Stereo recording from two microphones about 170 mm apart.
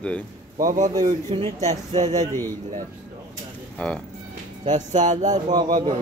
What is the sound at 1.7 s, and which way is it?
Speech, 40° right (ahead or behind).